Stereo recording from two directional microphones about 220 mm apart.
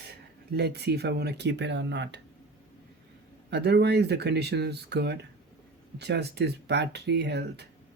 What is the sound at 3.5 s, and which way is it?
Speech, 50° right (ahead or behind).